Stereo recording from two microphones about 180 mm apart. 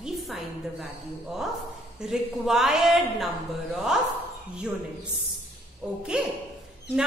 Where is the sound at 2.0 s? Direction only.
Centre (ahead or behind).